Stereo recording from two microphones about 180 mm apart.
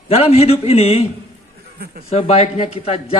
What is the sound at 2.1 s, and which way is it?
A man's voice, 35° left (ahead or behind).